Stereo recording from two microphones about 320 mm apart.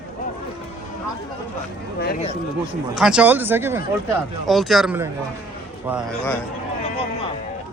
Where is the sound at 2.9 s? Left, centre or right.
Centre.